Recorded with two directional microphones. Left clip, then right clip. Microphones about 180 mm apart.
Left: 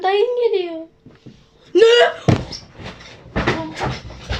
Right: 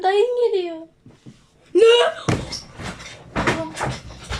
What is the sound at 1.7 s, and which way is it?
Door, centre (ahead or behind).